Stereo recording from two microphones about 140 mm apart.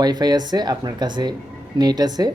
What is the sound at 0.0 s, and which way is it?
Speech, 30° right (ahead or behind).